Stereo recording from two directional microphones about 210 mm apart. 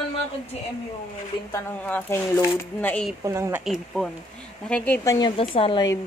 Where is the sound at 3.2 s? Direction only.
15° right (ahead or behind).